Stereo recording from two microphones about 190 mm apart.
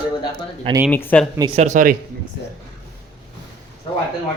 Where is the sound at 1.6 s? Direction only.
40° right (ahead or behind).